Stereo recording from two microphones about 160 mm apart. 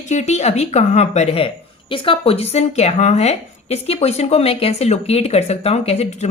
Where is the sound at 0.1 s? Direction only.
45° left (ahead or behind).